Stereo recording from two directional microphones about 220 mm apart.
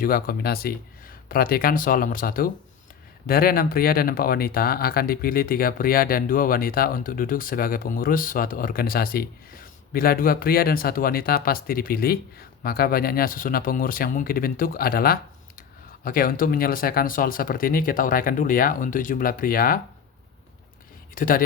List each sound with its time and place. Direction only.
0.0 s speech: 40° left (ahead or behind)
21.2 s speech: 40° left (ahead or behind)